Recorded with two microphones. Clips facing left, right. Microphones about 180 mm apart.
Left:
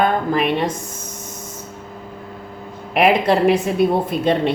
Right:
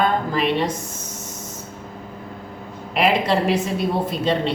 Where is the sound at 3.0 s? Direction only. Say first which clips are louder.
Left 4 dB; 55° left (ahead or behind).